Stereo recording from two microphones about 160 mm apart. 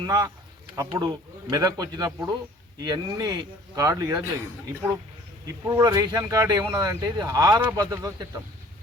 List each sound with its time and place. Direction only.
0.0 s speech: 25° right (ahead or behind)
5.5 s speech: 20° right (ahead or behind)